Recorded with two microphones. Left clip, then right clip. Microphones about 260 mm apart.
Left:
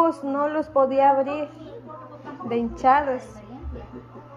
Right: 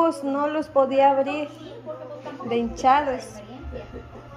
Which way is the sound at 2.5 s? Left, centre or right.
Right.